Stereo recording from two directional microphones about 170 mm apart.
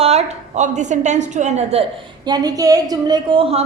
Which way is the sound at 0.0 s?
40° right (ahead or behind).